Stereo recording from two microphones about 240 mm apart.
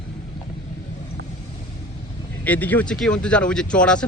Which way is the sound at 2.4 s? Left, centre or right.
Centre.